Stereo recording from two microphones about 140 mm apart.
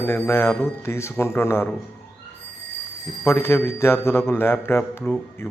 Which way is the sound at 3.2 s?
15° left (ahead or behind).